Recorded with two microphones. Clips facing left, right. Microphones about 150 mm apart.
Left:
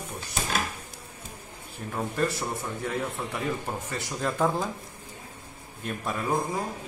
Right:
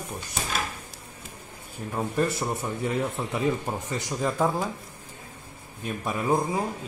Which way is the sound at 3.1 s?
20° right (ahead or behind).